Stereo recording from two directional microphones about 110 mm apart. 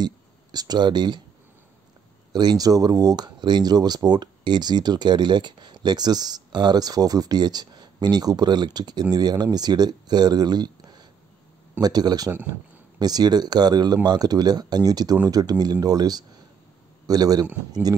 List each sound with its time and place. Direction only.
0.0 s speech: 40° right (ahead or behind)
2.3 s a man's voice: 35° right (ahead or behind)